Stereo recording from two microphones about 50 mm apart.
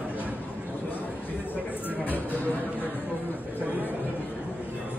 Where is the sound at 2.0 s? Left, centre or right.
Left.